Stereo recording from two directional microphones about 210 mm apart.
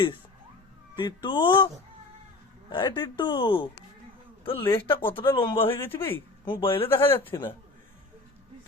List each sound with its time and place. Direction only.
0.9 s speech: 20° left (ahead or behind)
5.7 s speech: 10° left (ahead or behind)
6.4 s speech: 25° left (ahead or behind)
7.1 s speech: 10° left (ahead or behind)